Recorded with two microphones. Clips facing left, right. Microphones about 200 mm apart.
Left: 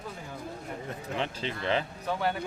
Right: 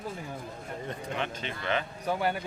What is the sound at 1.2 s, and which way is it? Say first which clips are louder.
Speech: left 2 dB; 30° left (ahead or behind).